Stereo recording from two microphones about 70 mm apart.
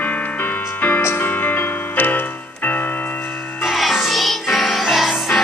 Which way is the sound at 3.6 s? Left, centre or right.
Centre.